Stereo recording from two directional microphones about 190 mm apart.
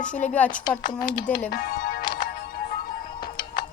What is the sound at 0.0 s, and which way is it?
Speech, 5° left (ahead or behind).